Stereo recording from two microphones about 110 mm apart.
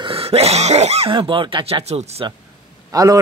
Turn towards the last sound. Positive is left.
turn(degrees=-30)  # may be behind; listen again after turning